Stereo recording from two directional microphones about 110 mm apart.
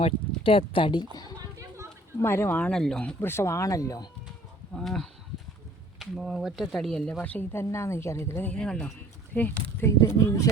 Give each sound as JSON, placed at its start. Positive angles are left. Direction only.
{"t": 0.0, "sound": "speech", "side_deg": 55}
{"t": 1.4, "sound": "a sound", "side_deg": -30}
{"t": 2.2, "sound": "speech", "side_deg": 20}
{"t": 3.0, "sound": "speech", "side_deg": 15}
{"t": 4.7, "sound": "speech", "side_deg": 5}
{"t": 7.2, "sound": "speech", "side_deg": 15}
{"t": 8.5, "sound": "speech", "side_deg": 10}
{"t": 10.0, "sound": "speech", "side_deg": 30}